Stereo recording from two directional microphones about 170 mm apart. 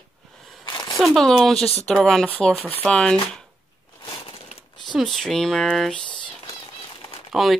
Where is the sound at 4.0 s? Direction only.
30° left (ahead or behind).